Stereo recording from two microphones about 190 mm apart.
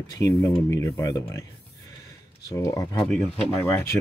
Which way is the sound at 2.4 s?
15° left (ahead or behind).